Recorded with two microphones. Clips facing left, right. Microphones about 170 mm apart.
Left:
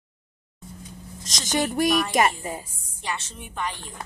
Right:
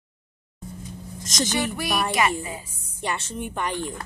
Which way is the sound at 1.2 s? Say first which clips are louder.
Right 12 dB; 45° right (ahead or behind).